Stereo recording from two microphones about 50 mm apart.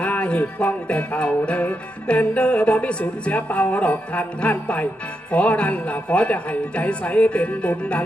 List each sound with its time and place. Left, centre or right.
0.2 s music: left